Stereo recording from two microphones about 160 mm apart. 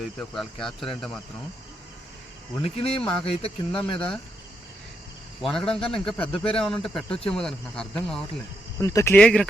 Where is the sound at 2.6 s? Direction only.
35° left (ahead or behind).